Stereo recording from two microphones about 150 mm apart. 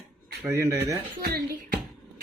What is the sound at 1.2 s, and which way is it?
Speech, 90° right.